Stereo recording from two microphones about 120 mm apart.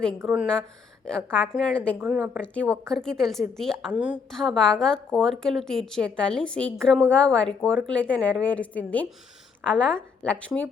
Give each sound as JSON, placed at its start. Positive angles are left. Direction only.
{"t": 1.0, "sound": "a woman's voice", "side_deg": 5}
{"t": 2.0, "sound": "a woman's voice", "side_deg": -15}
{"t": 2.4, "sound": "a woman's voice", "side_deg": 10}
{"t": 3.9, "sound": "a woman's voice", "side_deg": -10}
{"t": 4.3, "sound": "a woman's voice", "side_deg": 5}